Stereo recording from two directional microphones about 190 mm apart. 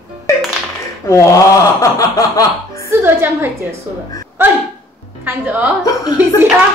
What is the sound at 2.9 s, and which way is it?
Speech, 15° right (ahead or behind).